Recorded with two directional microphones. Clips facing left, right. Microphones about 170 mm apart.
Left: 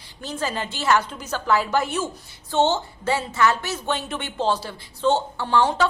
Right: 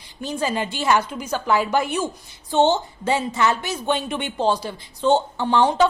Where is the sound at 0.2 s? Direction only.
15° right (ahead or behind).